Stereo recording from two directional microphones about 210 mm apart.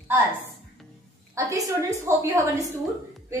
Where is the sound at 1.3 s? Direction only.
15° right (ahead or behind).